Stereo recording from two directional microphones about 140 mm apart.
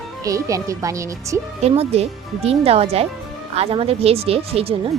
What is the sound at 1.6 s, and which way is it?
Speech, 45° right (ahead or behind).